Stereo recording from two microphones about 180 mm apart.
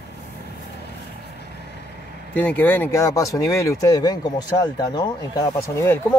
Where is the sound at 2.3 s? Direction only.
10° left (ahead or behind).